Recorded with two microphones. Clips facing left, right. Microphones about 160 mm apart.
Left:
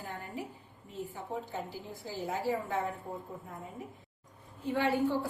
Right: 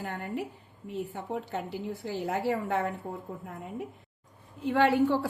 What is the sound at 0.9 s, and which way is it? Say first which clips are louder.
A woman's voice: right 5 dB; 70° right (ahead or behind).